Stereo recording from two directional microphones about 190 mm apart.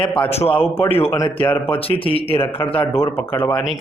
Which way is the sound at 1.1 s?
10° left (ahead or behind).